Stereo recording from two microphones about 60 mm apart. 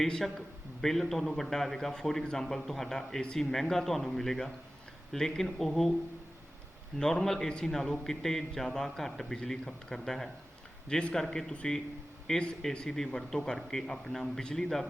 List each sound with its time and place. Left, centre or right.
0.0 s a man's voice: centre
7.0 s a man's voice: centre